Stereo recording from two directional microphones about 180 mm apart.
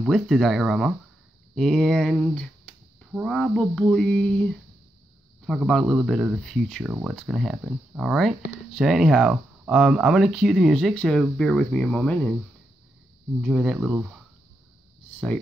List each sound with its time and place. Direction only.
0.0 s speech: centre (ahead or behind)
1.5 s a sound: 5° left (ahead or behind)
3.1 s speech: centre (ahead or behind)
13.4 s speech: 5° right (ahead or behind)